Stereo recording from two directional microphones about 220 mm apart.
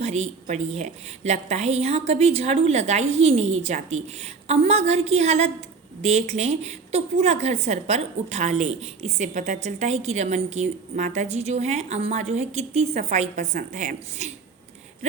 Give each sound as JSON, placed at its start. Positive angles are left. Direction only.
{"t": 0.0, "sound": "a woman's voice", "side_deg": -30}